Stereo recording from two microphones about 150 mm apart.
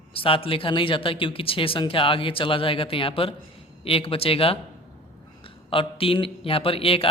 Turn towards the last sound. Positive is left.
turn(degrees=40)  # may be behind; listen again after turning